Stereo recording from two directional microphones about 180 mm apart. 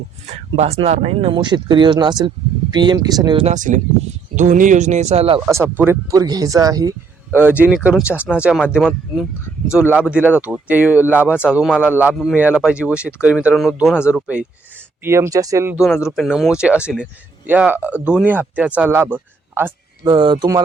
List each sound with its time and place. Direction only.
0.3 s speech: 40° right (ahead or behind); by 3.4 s 20° right (ahead or behind)
3.4 s speech: 45° right (ahead or behind)
5.5 s speech: 15° right (ahead or behind)
9.7 s speech: 5° right (ahead or behind)
16.0 s speech: centre (ahead or behind)
20.1 s speech: 25° right (ahead or behind)